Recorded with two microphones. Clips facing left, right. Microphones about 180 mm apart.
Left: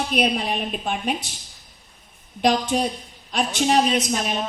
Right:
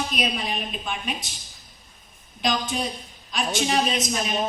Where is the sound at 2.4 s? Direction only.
65° left (ahead or behind).